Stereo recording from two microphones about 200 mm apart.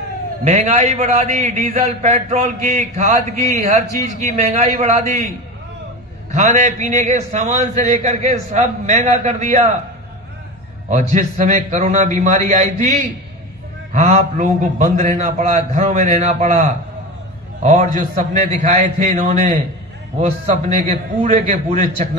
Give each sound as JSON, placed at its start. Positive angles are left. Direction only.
{"t": 0.4, "sound": "a man's voice", "side_deg": -30}
{"t": 6.3, "sound": "a man's voice", "side_deg": -35}
{"t": 10.9, "sound": "a man's voice", "side_deg": -35}
{"t": 13.9, "sound": "a man's voice", "side_deg": -35}
{"t": 17.6, "sound": "a man's voice", "side_deg": -35}